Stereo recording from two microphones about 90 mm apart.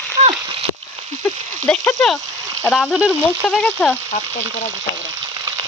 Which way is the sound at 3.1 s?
20° left (ahead or behind).